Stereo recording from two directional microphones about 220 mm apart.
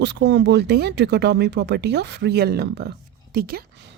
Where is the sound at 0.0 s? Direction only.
50° right (ahead or behind).